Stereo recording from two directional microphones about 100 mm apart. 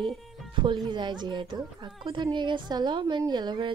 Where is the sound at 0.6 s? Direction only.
50° right (ahead or behind).